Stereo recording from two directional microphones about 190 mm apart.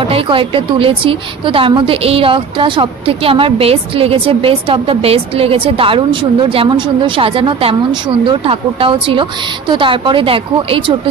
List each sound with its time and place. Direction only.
0.1 s a woman's voice: 30° right (ahead or behind)